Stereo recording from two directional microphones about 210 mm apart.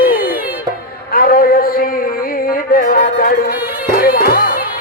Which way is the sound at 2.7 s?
45° left (ahead or behind).